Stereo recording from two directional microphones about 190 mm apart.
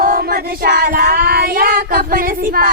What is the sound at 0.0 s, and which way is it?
Child singing, 50° right (ahead or behind).